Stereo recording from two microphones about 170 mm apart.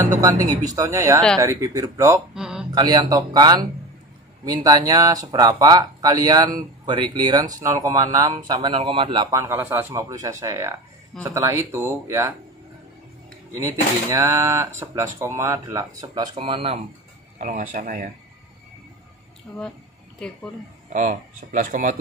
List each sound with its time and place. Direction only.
0.7 s speech: 20° right (ahead or behind)
2.3 s a sound: 5° right (ahead or behind)
2.7 s speech: 25° right (ahead or behind)
9.3 s speech: 15° right (ahead or behind)
13.6 s speech: 15° right (ahead or behind); by 16.8 s 35° right (ahead or behind)
17.4 s speech: 50° right (ahead or behind)
19.5 s speech: 5° left (ahead or behind)
20.9 s speech: 50° right (ahead or behind)